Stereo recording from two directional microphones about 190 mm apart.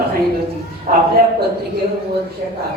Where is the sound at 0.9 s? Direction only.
45° right (ahead or behind).